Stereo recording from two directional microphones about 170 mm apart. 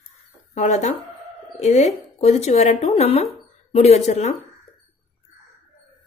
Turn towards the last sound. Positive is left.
turn(degrees=40)  # may be behind; listen again after turning